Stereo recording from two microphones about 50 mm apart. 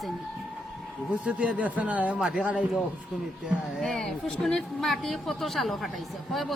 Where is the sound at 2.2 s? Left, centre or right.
Centre.